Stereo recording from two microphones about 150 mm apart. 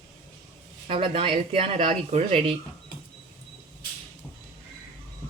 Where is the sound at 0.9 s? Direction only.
40° right (ahead or behind).